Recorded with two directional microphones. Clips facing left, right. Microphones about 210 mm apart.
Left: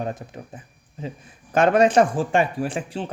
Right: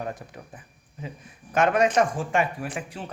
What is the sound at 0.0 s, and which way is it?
Speech, 25° left (ahead or behind).